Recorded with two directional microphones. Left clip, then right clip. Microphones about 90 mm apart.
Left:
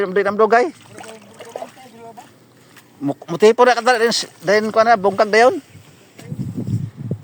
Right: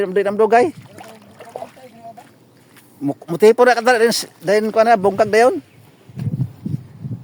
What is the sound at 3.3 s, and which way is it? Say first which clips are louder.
Speech: right 1 dB; 70° right (ahead or behind).